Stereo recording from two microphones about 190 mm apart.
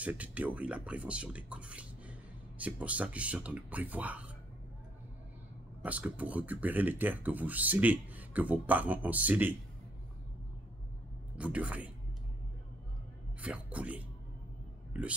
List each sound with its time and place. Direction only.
0.0 s speech: 10° right (ahead or behind)
5.8 s speech: 10° right (ahead or behind)
11.3 s speech: 5° right (ahead or behind)
13.4 s speech: 5° right (ahead or behind)
14.9 s a sound: 5° right (ahead or behind)